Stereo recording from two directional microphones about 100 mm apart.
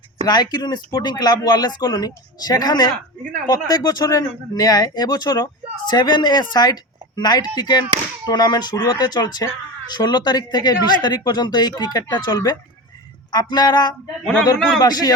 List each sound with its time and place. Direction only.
0.3 s speech: 40° left (ahead or behind)